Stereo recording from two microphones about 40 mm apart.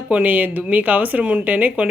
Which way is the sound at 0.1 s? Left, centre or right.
Right.